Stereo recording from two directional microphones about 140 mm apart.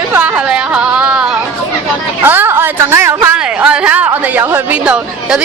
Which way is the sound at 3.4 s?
10° right (ahead or behind).